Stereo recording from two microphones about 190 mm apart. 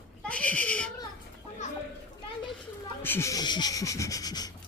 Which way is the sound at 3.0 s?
15° left (ahead or behind).